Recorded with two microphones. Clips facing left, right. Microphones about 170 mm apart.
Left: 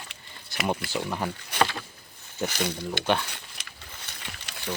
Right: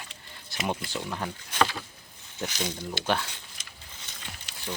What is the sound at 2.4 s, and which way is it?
Speech, 60° left (ahead or behind).